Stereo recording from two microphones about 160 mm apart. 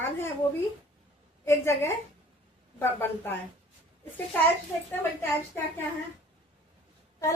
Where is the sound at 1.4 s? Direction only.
15° left (ahead or behind).